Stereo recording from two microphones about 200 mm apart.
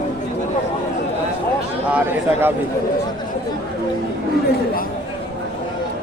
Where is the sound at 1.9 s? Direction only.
10° right (ahead or behind).